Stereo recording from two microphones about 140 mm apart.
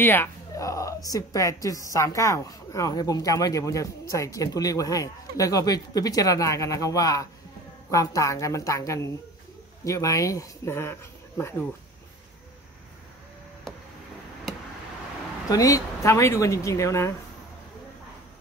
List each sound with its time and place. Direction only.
0.0 s speech: 15° left (ahead or behind)
15.5 s speech: 25° left (ahead or behind)